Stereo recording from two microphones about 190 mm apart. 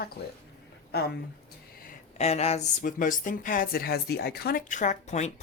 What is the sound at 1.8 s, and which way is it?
Speech, 35° left (ahead or behind).